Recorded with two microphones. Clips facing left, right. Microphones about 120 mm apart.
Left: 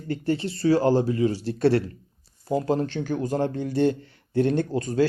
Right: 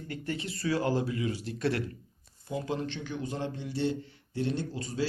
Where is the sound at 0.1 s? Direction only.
30° left (ahead or behind).